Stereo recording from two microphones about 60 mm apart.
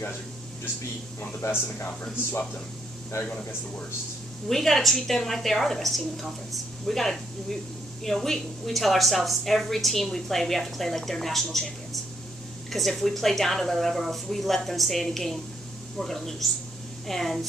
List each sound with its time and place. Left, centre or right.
1.4 s speech: left
4.5 s a woman's voice: centre